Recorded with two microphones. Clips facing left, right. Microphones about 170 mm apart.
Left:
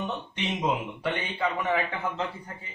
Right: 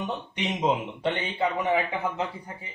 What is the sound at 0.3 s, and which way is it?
A man's voice, 20° right (ahead or behind).